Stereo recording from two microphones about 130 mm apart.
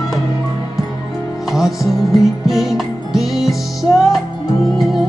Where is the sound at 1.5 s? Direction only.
Centre (ahead or behind).